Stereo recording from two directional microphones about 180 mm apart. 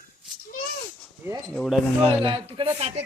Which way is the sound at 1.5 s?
Centre (ahead or behind).